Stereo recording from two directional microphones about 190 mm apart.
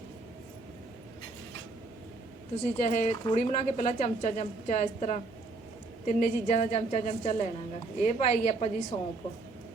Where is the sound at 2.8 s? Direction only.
35° left (ahead or behind).